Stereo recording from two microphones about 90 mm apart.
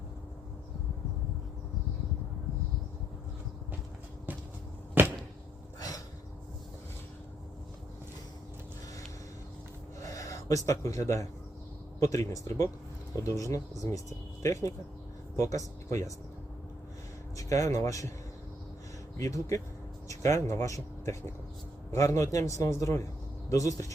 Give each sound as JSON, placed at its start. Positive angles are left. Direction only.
{"t": 4.3, "sound": "a sound", "side_deg": -20}
{"t": 5.0, "sound": "arrow", "side_deg": -20}
{"t": 10.0, "sound": "a man's voice", "side_deg": 40}
{"t": 17.3, "sound": "a man's voice", "side_deg": 40}
{"t": 19.1, "sound": "a man's voice", "side_deg": 40}